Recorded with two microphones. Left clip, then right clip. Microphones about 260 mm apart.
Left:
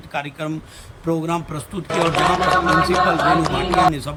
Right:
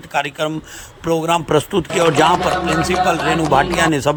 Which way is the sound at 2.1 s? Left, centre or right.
Centre.